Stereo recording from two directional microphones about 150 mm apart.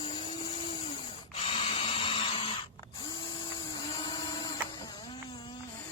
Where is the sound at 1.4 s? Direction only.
40° left (ahead or behind).